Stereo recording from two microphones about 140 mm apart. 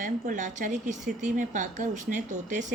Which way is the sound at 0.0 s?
65° right (ahead or behind).